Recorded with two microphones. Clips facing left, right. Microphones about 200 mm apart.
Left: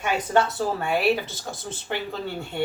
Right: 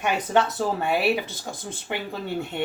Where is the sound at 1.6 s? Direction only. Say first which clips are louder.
Left 1 dB; 15° right (ahead or behind).